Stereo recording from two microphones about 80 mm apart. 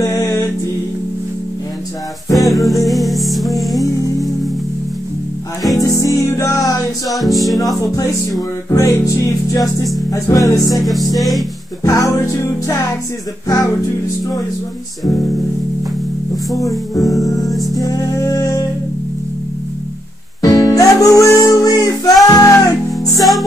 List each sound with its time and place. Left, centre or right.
0.0 s music: left
2.3 s music: centre
5.8 s music: left
7.1 s music: centre
7.8 s music: left
10.9 s music: centre
11.8 s music: left
16.5 s music: left
17.5 s music: centre
17.7 s music: left
20.4 s music: left